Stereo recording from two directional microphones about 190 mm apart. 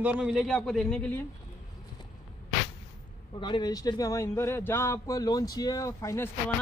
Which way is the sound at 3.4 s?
25° left (ahead or behind).